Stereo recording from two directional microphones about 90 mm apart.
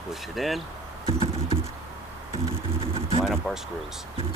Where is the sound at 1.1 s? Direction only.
80° right.